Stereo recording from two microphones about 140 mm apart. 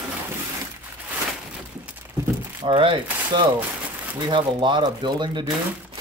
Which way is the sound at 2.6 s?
35° right (ahead or behind).